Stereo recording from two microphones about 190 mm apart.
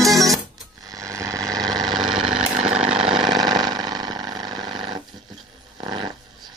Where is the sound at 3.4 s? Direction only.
20° right (ahead or behind).